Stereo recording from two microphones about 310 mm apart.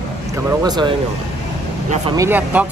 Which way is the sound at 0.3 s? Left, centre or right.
Centre.